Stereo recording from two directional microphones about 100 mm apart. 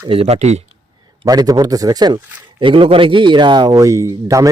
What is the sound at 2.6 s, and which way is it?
A man's voice, 60° right (ahead or behind).